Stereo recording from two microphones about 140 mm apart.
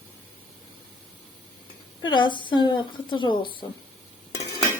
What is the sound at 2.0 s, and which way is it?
Speech, 35° left (ahead or behind).